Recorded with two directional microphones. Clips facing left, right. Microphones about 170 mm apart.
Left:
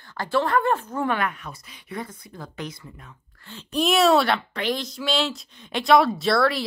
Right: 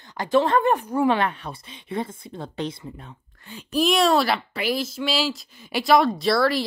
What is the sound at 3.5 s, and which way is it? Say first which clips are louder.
Speech: right 3 dB; 10° right (ahead or behind).